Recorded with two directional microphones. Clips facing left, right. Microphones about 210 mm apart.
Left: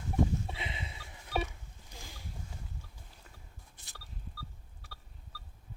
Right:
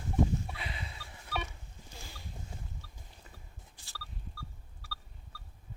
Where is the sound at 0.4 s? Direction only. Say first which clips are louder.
Left 1 dB; 20° left (ahead or behind).